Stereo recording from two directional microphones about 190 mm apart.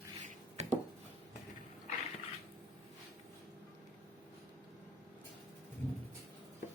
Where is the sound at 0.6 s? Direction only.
35° right (ahead or behind).